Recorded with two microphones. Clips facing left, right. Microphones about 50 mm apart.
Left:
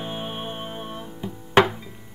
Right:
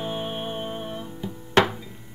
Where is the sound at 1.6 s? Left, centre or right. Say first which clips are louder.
Left 2 dB; centre.